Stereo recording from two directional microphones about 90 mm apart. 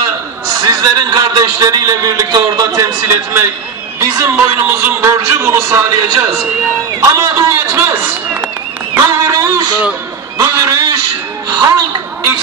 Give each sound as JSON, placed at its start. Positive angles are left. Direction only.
{"t": 0.5, "sound": "a man's voice", "side_deg": -45}
{"t": 4.0, "sound": "speech", "side_deg": -30}
{"t": 8.9, "sound": "a sound", "side_deg": -35}